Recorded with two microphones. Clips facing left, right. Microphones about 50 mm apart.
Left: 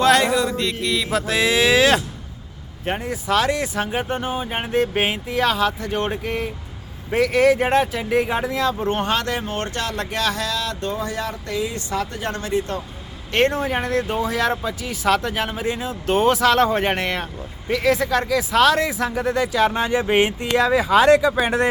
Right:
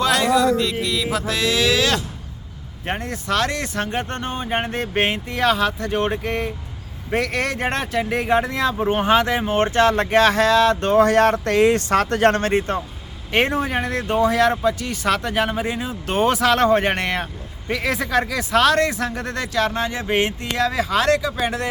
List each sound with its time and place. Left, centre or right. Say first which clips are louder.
0.0 s a sound: left 3 dB; centre
0.3 s speech: right 4 dB; centre
1.3 s speech: left 3 dB; centre
2.8 s speech: left 1 dB; centre; by 10.9 s right
10.9 s speech: right 12 dB; right
13.3 s speech: even; centre